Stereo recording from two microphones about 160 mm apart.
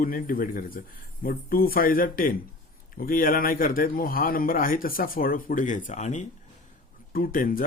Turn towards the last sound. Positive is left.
turn(degrees=60)  # may be behind; listen again after turning